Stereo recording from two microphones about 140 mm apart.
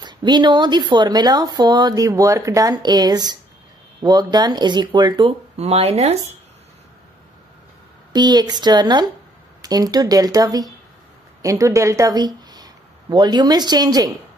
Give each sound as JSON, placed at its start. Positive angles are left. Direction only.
{"t": 0.0, "sound": "speech", "side_deg": -30}
{"t": 5.6, "sound": "speech", "side_deg": -45}
{"t": 8.1, "sound": "speech", "side_deg": -30}